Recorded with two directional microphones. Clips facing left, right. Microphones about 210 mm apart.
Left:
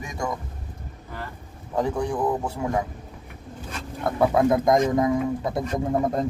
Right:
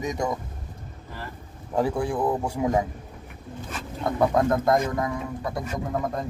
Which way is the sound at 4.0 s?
5° left (ahead or behind).